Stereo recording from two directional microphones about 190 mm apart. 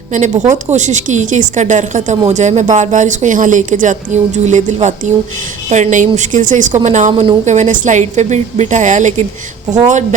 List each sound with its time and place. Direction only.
0.1 s a woman's voice: 40° right (ahead or behind)
7.1 s speech: 25° right (ahead or behind)
7.4 s a woman's voice: 40° right (ahead or behind)